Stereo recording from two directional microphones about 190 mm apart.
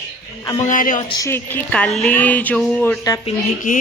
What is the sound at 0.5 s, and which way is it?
Speech, 45° left (ahead or behind).